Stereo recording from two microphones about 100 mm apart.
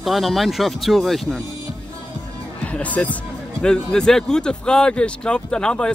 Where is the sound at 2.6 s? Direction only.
15° left (ahead or behind).